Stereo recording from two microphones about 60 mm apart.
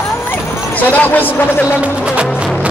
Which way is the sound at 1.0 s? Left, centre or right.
Left.